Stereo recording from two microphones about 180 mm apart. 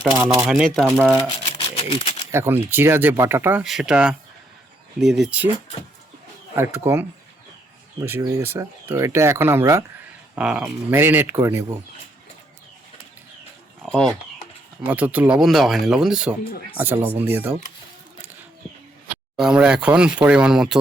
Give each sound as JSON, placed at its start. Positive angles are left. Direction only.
{"t": 0.1, "sound": "speech", "side_deg": -20}
{"t": 0.4, "sound": "speech", "side_deg": 0}
{"t": 0.9, "sound": "speech", "side_deg": -15}
{"t": 1.3, "sound": "a sound", "side_deg": 30}
{"t": 2.3, "sound": "speech", "side_deg": -15}
{"t": 6.6, "sound": "speech", "side_deg": -15}
{"t": 13.8, "sound": "speech", "side_deg": 5}
{"t": 14.8, "sound": "speech", "side_deg": -10}
{"t": 16.4, "sound": "speech", "side_deg": 55}
{"t": 16.7, "sound": "speech", "side_deg": -10}
{"t": 19.4, "sound": "speech", "side_deg": -5}